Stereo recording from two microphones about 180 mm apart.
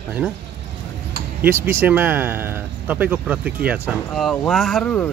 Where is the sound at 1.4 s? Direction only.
10° right (ahead or behind); by 5.1 s 5° left (ahead or behind).